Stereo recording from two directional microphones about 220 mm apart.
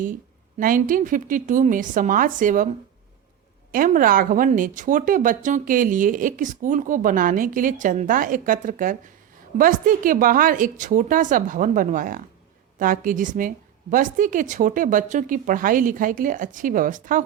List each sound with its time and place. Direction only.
0.6 s speech: 40° right (ahead or behind)
3.7 s speech: 40° right (ahead or behind)